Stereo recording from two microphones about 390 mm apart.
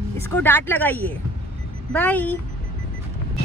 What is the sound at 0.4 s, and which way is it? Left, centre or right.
Speech, centre.